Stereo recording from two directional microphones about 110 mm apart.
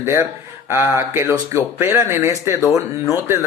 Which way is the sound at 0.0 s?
20° right (ahead or behind).